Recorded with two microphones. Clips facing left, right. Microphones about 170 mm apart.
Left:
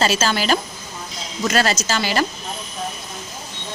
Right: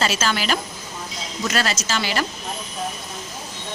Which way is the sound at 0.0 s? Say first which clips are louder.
Left 3 dB; 35° left (ahead or behind).